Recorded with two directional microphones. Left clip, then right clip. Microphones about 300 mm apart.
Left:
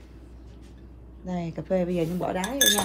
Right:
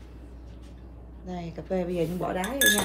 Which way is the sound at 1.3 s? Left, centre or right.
Centre.